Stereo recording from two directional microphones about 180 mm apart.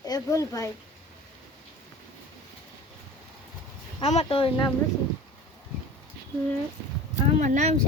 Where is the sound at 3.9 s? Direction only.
35° left (ahead or behind).